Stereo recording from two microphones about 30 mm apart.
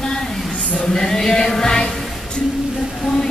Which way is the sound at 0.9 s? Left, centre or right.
Centre.